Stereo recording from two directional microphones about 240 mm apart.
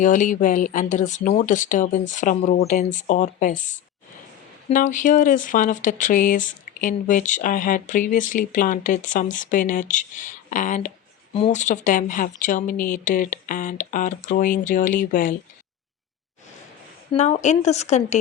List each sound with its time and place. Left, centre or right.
0.0 s speech: left
4.7 s speech: left
17.1 s a woman's voice: left